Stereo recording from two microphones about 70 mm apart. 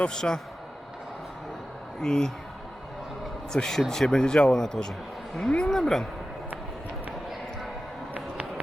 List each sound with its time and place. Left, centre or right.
0.0 s speech: centre
2.0 s speech: centre
3.5 s speech: centre
8.1 s a sound: right